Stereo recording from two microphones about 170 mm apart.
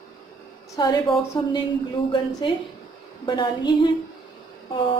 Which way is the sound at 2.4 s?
30° left (ahead or behind).